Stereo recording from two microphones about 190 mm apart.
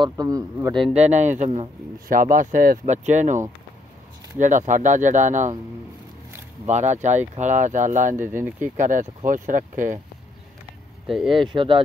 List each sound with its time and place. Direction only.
0.0 s a man's voice: 20° right (ahead or behind)
0.9 s speech: 35° right (ahead or behind)
2.0 s speech: 45° right (ahead or behind)
6.7 s speech: 40° right (ahead or behind)
11.2 s a man's voice: 25° right (ahead or behind)